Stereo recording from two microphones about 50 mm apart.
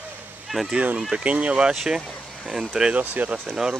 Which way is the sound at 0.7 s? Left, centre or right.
Right.